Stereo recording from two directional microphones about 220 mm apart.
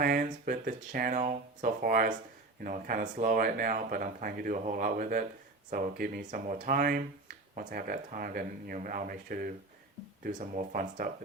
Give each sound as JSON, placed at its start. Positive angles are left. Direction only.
{"t": 0.0, "sound": "speech", "side_deg": -40}